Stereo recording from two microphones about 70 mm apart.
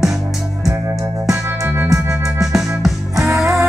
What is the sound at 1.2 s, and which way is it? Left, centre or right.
Music, right.